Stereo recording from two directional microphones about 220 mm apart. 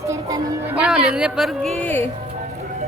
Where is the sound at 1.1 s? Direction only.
5° right (ahead or behind).